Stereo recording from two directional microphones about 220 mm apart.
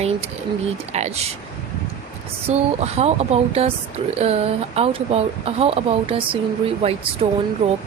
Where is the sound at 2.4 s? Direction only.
30° right (ahead or behind).